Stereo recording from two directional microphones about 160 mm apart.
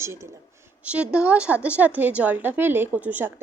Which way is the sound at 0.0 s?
15° right (ahead or behind).